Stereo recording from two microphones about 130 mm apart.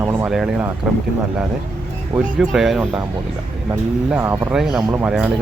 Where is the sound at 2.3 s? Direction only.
Centre (ahead or behind).